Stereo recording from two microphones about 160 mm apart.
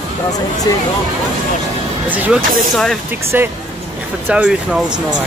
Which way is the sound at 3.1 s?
15° right (ahead or behind).